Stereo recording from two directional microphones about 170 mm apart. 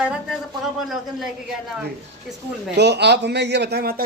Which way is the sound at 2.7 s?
85° right.